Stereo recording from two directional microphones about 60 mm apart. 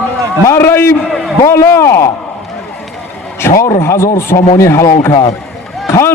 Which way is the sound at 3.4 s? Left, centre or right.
Left.